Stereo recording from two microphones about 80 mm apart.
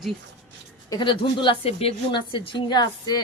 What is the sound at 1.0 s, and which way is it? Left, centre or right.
A woman's voice, left.